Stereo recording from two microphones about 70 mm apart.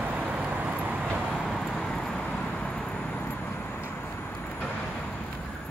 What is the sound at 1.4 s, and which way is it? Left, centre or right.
Vehicle, centre.